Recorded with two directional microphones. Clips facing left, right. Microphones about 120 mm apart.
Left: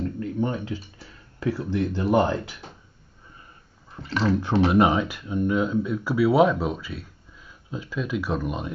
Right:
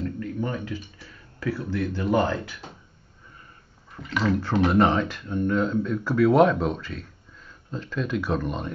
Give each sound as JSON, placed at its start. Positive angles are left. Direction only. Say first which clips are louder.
{"t": 0.0, "sound": "a sound", "louder": "left 3 dB", "side_deg": 25}
{"t": 0.7, "sound": "speech", "louder": "right 2 dB", "side_deg": 30}
{"t": 3.9, "sound": "speech", "louder": "left 1 dB", "side_deg": 30}
{"t": 4.6, "sound": "speech", "louder": "even", "side_deg": 10}